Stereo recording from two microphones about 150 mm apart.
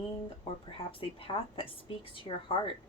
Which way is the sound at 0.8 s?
35° left (ahead or behind).